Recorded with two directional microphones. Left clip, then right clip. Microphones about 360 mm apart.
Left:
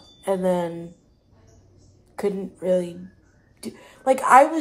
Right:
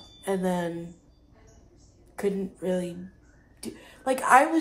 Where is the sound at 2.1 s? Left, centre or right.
Centre.